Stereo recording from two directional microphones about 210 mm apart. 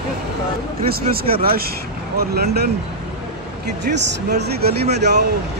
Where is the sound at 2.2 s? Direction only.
50° right (ahead or behind).